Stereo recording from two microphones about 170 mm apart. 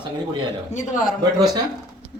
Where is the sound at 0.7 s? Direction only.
45° left (ahead or behind).